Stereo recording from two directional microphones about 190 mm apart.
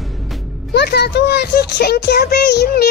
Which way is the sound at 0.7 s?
60° left (ahead or behind).